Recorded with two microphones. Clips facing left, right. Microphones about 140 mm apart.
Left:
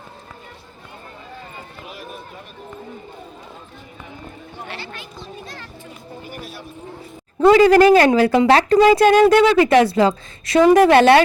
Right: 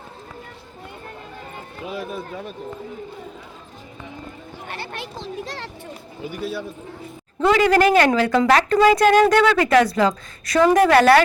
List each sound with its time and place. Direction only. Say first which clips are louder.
4.7 s speech: right 4 dB; 55° right (ahead or behind)
5.1 s a child's voice: right 5 dB; 90° right
7.4 s a woman's voice: left 6 dB; 30° left (ahead or behind)